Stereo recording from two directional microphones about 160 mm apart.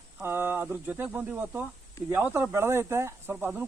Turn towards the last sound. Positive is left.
turn(degrees=-10)  # may be behind; listen again after turning